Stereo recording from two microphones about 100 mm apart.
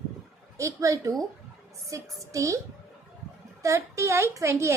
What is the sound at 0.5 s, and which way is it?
A woman's voice, 30° right (ahead or behind).